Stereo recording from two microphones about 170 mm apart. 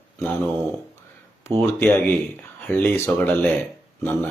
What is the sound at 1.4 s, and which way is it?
Speech, 10° left (ahead or behind).